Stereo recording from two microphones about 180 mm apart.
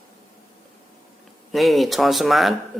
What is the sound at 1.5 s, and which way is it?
Speech, centre (ahead or behind).